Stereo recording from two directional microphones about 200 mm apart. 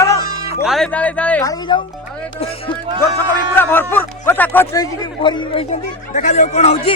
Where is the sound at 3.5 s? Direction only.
10° left (ahead or behind).